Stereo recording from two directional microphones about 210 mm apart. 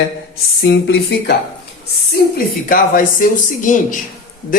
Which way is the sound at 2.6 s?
40° left (ahead or behind).